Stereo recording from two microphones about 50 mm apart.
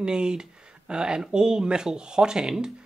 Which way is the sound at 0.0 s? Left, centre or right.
Centre.